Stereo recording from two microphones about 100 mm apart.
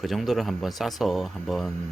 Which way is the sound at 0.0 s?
Centre (ahead or behind).